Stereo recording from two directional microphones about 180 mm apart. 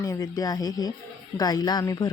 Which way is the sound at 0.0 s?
20° left (ahead or behind).